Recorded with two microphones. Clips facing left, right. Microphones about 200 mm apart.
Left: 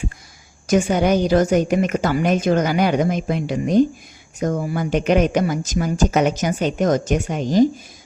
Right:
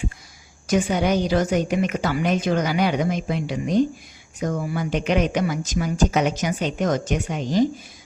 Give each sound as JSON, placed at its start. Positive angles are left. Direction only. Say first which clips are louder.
{"t": 0.7, "sound": "speech", "louder": "left 4 dB", "side_deg": 45}